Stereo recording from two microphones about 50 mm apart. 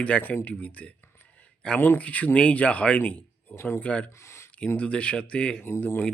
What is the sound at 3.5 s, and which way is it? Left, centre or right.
Speech, left.